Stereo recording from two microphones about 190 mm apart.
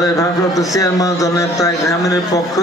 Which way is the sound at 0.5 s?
20° left (ahead or behind).